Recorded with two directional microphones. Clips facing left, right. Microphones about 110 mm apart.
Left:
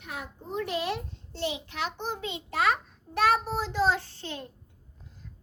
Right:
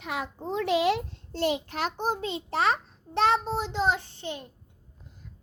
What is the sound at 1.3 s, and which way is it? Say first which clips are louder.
A child's voice: right 5 dB; 50° right (ahead or behind).